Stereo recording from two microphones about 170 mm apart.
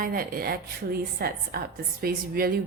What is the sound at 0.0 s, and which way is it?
A woman's voice, 55° right (ahead or behind).